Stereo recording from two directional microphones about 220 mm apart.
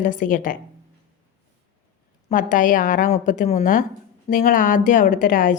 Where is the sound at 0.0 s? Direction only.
35° left (ahead or behind).